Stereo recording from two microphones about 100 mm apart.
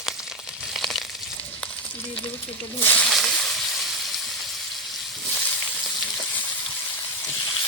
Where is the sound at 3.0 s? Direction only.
Centre (ahead or behind).